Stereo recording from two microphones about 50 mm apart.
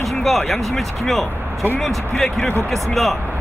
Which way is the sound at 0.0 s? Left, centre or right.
Centre.